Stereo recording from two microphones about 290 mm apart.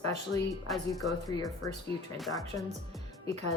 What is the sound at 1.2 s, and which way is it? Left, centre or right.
Speech, centre.